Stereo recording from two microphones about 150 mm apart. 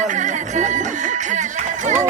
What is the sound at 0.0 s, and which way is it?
Music, 55° right (ahead or behind).